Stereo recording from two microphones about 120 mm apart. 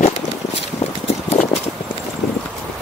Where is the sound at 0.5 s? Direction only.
55° left (ahead or behind).